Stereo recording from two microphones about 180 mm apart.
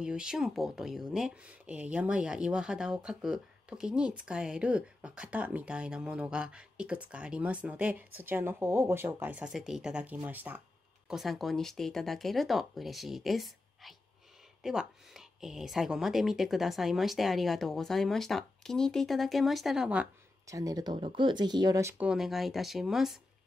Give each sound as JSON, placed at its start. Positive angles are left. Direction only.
{"t": 0.0, "sound": "speech", "side_deg": -5}
{"t": 20.4, "sound": "speech", "side_deg": -20}